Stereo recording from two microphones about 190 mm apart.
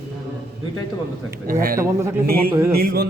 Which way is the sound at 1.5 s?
50° right (ahead or behind).